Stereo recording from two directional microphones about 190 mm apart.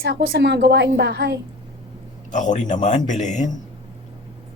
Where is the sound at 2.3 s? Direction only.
40° left (ahead or behind).